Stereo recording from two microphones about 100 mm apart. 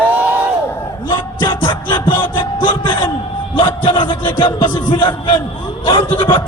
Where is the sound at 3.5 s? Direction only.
55° left (ahead or behind).